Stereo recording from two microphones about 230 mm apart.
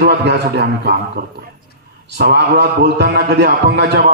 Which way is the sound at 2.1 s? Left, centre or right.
Right.